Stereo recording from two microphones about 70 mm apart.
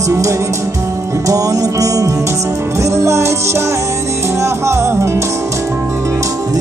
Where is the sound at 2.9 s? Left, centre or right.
Right.